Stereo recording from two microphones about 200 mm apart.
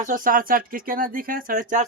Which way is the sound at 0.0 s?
40° right (ahead or behind).